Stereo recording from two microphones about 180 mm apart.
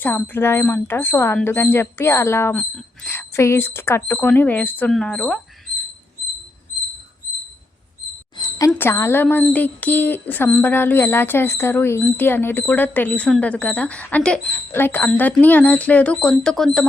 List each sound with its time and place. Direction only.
0.0 s speech: 10° left (ahead or behind)
8.4 s speech: 20° left (ahead or behind); by 16.8 s 5° left (ahead or behind)